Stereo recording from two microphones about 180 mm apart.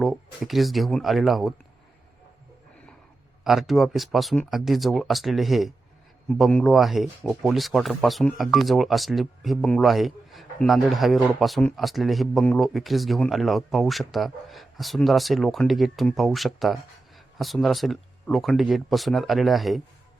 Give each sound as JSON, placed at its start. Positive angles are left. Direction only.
{"t": 0.0, "sound": "speech", "side_deg": 0}
{"t": 3.4, "sound": "speech", "side_deg": 0}